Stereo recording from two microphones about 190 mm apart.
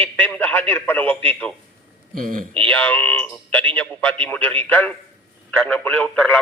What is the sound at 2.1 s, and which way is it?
Speech, 45° right (ahead or behind).